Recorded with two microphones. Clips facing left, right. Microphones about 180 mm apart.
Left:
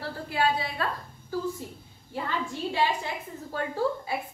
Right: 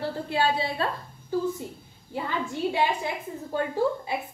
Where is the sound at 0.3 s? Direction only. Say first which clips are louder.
Right 1 dB; 30° right (ahead or behind).